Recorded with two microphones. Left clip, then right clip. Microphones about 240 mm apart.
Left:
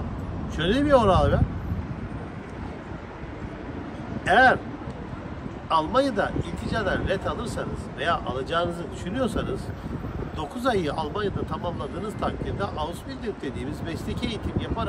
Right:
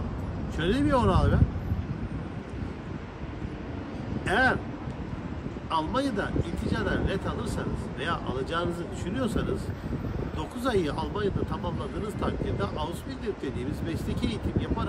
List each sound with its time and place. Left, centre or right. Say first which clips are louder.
0.6 s speech: left 6 dB; centre
4.3 s speech: left 7 dB; centre
5.7 s speech: left 6 dB; centre
10.6 s speech: left 3 dB; centre